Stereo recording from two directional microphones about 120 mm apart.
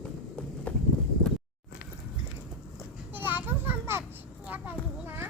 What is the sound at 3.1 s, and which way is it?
Children playing, 15° right (ahead or behind).